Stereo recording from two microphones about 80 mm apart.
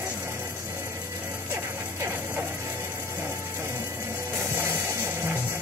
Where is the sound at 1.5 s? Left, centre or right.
Right.